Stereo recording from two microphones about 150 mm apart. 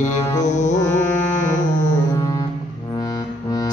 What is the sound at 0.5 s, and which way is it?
Music, 55° left (ahead or behind).